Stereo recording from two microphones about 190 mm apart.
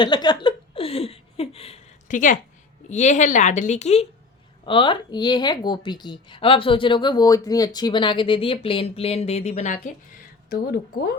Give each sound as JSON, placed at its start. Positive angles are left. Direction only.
{"t": 0.0, "sound": "a woman's voice", "side_deg": 25}
{"t": 0.4, "sound": "a sound", "side_deg": 30}
{"t": 2.9, "sound": "speech", "side_deg": 40}
{"t": 4.6, "sound": "a woman's voice", "side_deg": 25}
{"t": 10.5, "sound": "speech", "side_deg": 55}